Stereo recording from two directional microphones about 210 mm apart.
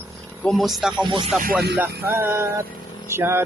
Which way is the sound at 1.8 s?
10° right (ahead or behind).